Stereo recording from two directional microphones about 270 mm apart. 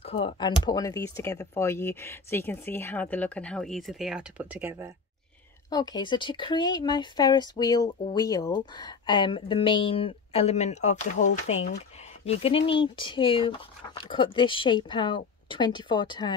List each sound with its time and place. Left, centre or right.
0.0 s a sound: left
0.7 s speech: centre
5.7 s speech: centre